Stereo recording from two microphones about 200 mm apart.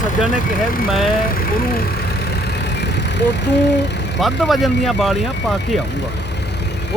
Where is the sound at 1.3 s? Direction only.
45° left (ahead or behind).